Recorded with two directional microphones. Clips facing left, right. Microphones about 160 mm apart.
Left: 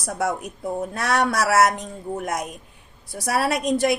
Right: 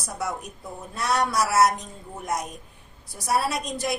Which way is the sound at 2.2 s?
65° left (ahead or behind).